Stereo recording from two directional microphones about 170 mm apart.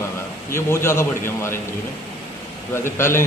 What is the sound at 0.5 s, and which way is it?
A man's voice, 15° left (ahead or behind).